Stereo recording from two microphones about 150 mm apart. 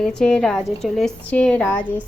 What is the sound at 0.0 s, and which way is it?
A woman's voice, 5° left (ahead or behind).